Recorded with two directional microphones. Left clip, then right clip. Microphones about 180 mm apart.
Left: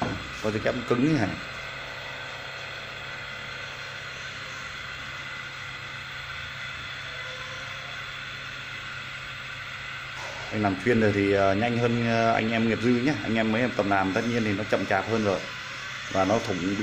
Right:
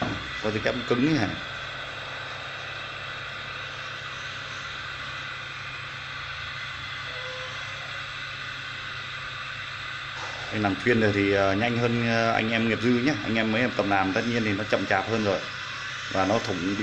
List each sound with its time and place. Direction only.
0.4 s speech: 10° left (ahead or behind)
10.6 s speech: 10° left (ahead or behind)